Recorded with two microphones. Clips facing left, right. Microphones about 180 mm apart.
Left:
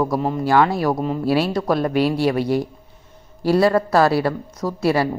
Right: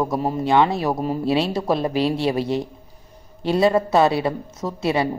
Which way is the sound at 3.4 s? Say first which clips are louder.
Left 2 dB; 20° right (ahead or behind).